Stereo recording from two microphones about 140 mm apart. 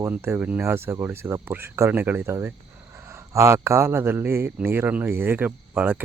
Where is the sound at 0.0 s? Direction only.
15° right (ahead or behind).